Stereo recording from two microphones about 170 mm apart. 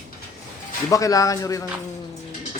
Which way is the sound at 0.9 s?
20° left (ahead or behind).